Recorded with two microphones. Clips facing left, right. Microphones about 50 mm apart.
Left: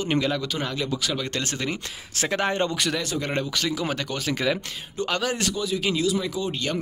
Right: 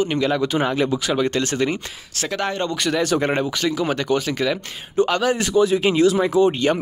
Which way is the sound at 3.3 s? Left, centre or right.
Centre.